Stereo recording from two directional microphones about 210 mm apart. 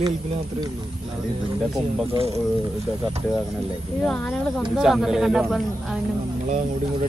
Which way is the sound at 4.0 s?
5° left (ahead or behind).